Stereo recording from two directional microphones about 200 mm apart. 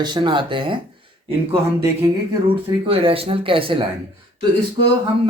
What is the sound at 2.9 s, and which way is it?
Speech, 30° right (ahead or behind).